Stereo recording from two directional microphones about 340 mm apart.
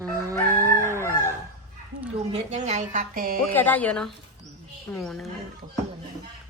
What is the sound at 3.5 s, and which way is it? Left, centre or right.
A woman's voice, centre.